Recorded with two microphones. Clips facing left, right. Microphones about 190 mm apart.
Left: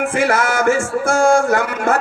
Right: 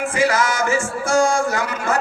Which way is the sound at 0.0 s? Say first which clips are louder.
Left 2 dB; 55° left (ahead or behind).